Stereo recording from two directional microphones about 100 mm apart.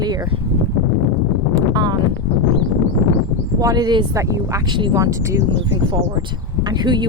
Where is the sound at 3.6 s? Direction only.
40° right (ahead or behind).